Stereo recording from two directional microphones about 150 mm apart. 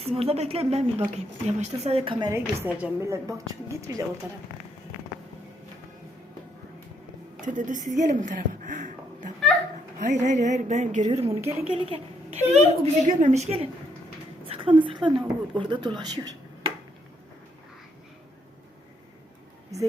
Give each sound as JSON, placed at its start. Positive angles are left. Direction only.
{"t": 0.0, "sound": "a woman's voice", "side_deg": -40}
{"t": 2.3, "sound": "a woman's voice", "side_deg": -15}
{"t": 7.4, "sound": "a woman's voice", "side_deg": -55}